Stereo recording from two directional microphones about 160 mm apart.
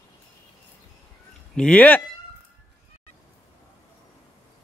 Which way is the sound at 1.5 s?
5° left (ahead or behind).